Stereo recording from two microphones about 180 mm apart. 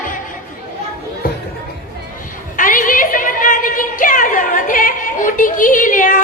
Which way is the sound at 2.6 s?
50° left (ahead or behind).